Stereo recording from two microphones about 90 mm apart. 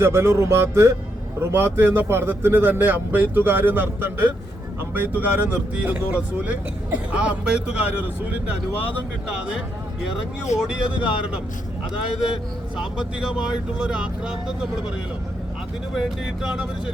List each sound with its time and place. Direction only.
0.0 s a man's voice: 30° right (ahead or behind)
10.4 s speech: 10° right (ahead or behind)
12.7 s speech: 10° right (ahead or behind)
16.0 s speech: 5° right (ahead or behind)